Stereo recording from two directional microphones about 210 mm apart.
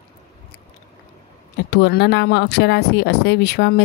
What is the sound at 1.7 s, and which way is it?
Speech, 50° left (ahead or behind).